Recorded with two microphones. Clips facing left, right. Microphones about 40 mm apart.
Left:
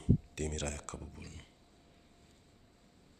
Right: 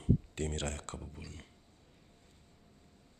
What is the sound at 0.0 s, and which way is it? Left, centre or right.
Speech, right.